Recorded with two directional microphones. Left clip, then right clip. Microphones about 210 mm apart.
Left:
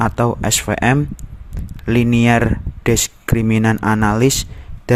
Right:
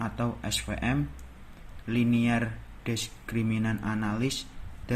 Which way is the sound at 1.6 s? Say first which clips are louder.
Left 15 dB; 55° left (ahead or behind).